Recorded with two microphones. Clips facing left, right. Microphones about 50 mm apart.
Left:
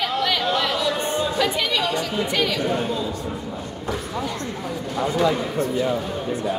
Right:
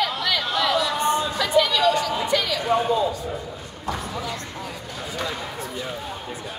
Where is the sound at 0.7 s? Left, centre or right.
Left.